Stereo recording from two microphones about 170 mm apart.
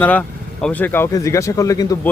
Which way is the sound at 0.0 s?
10° left (ahead or behind).